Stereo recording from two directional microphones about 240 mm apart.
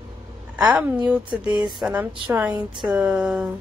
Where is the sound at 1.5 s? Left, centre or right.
Centre.